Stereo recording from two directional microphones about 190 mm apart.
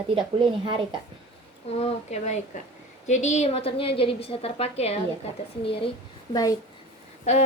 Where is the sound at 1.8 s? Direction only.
35° left (ahead or behind).